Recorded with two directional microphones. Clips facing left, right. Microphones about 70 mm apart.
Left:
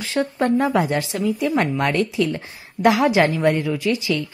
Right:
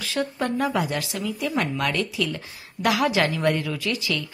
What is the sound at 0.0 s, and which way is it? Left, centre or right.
A woman's voice, left.